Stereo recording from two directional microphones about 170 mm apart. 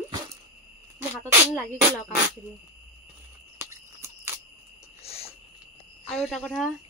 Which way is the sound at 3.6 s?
15° right (ahead or behind).